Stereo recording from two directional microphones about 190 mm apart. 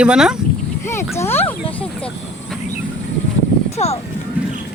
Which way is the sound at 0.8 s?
15° left (ahead or behind).